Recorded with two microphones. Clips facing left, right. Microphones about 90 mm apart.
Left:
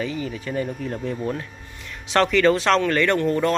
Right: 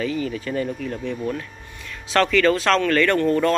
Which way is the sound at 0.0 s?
20° left (ahead or behind).